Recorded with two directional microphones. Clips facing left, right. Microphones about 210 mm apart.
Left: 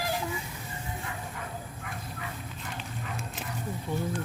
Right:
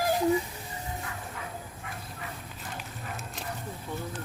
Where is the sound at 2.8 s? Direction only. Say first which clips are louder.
Left 3 dB; 5° right (ahead or behind).